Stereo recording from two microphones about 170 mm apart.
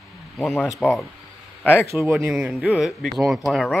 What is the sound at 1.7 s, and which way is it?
Speech, 15° right (ahead or behind).